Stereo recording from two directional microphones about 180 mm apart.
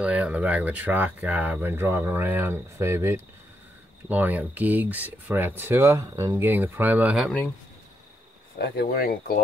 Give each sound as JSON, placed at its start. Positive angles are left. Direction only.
{"t": 0.0, "sound": "speech", "side_deg": -10}
{"t": 8.5, "sound": "speech", "side_deg": 60}